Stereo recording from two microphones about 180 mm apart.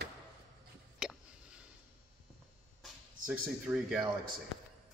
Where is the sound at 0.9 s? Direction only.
5° right (ahead or behind).